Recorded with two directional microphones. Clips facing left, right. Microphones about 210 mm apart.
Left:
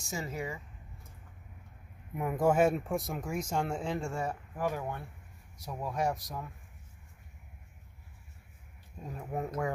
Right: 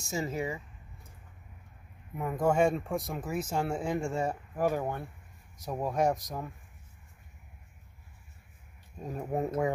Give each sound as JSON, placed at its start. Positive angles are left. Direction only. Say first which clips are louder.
{"t": 0.0, "sound": "speech", "louder": "right 4 dB", "side_deg": -25}
{"t": 2.1, "sound": "speech", "louder": "even", "side_deg": 10}
{"t": 4.1, "sound": "speech", "louder": "right 4 dB", "side_deg": -25}
{"t": 4.6, "sound": "speech", "louder": "right 5 dB", "side_deg": -40}
{"t": 9.3, "sound": "speech", "louder": "right 4 dB", "side_deg": -30}